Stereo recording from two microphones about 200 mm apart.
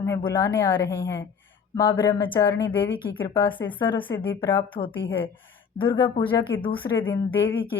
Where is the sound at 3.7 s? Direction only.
25° left (ahead or behind).